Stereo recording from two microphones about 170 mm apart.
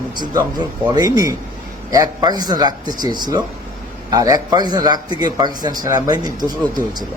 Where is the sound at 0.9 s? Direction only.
20° right (ahead or behind).